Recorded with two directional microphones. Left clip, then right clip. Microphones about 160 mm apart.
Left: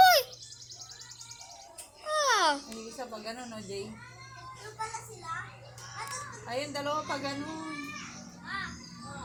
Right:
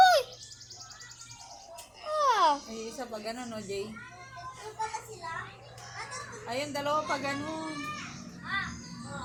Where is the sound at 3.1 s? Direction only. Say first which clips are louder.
Right 3 dB; 30° left (ahead or behind).